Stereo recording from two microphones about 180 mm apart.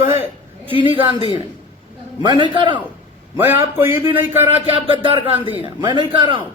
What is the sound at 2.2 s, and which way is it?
Speech, 25° right (ahead or behind).